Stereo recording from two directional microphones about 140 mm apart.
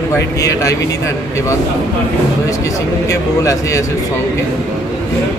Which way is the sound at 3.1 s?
25° left (ahead or behind).